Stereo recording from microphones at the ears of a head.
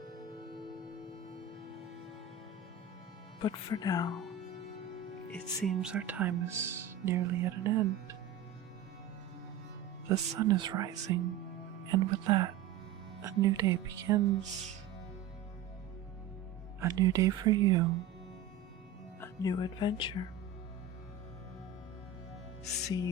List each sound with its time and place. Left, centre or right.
3.4 s music: left
5.6 s speech: right
10.1 s speech: right
16.8 s speech: right
19.2 s speech: left
22.6 s music: left